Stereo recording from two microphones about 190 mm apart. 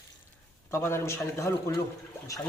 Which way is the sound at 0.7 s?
15° left (ahead or behind).